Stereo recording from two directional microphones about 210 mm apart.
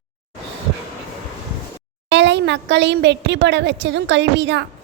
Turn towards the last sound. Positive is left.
turn(degrees=-55)  # may be behind; listen again after turning